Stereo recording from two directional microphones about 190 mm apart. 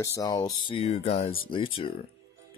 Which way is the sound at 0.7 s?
30° left (ahead or behind).